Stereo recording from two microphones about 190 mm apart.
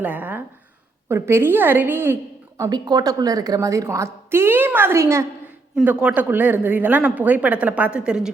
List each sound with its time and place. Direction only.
0.0 s a woman's voice: 10° right (ahead or behind)
2.6 s a woman's voice: 20° right (ahead or behind); by 8.3 s 5° right (ahead or behind)